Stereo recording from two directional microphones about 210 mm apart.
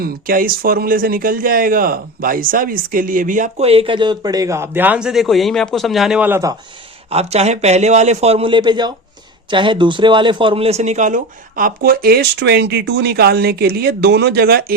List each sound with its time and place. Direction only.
0.0 s speech: 45° right (ahead or behind); by 6.6 s 15° right (ahead or behind)
7.1 s speech: 30° right (ahead or behind); by 14.6 s 50° right (ahead or behind)